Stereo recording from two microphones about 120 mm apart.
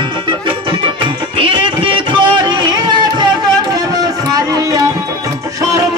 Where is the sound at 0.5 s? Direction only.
45° right (ahead or behind).